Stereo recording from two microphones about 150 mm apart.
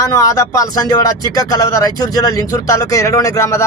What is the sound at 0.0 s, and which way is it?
Speech, 20° left (ahead or behind).